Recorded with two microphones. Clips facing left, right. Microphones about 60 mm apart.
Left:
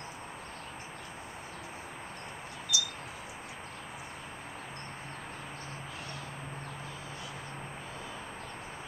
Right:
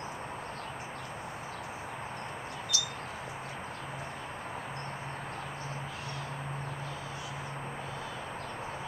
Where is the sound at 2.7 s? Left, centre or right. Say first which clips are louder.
Left 3 dB; centre.